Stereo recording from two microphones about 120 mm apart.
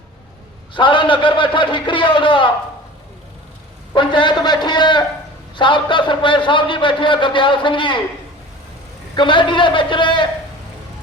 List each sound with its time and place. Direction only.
0.7 s a man's voice: 45° left (ahead or behind)
3.9 s a man's voice: 45° left (ahead or behind)
9.1 s a man's voice: 40° left (ahead or behind)